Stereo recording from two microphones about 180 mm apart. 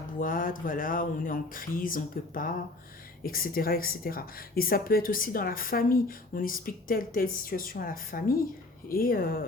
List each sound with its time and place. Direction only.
0.2 s a woman's voice: 50° left (ahead or behind)